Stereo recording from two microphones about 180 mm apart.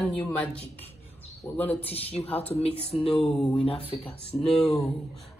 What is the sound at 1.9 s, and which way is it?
Speech, 35° left (ahead or behind).